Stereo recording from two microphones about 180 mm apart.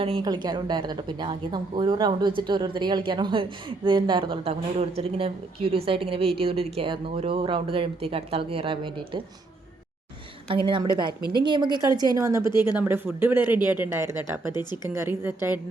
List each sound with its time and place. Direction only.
0.0 s a woman's voice: 25° right (ahead or behind)
10.5 s a woman's voice: 30° right (ahead or behind)
14.5 s speech: 25° left (ahead or behind)
14.8 s a woman's voice: 15° right (ahead or behind)